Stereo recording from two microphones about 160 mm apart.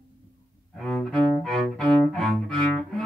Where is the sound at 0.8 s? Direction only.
5° left (ahead or behind).